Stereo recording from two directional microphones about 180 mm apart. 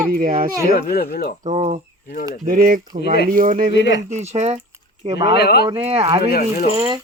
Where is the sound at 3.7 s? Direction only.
75° left (ahead or behind).